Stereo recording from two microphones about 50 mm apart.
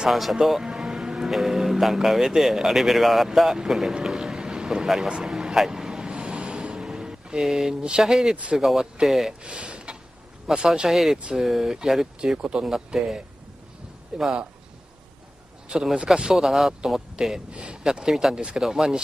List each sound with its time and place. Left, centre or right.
0.1 s speech: centre
5.1 s vehicle: centre
8.0 s speech: centre
9.4 s speech: right
10.7 s speech: centre
12.4 s speech: right
12.6 s speech: centre
15.7 s speech: centre
17.5 s speech: right
17.8 s speech: centre